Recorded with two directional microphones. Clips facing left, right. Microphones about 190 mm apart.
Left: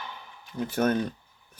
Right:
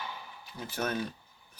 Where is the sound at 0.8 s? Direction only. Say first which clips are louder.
Left 8 dB; 50° left (ahead or behind).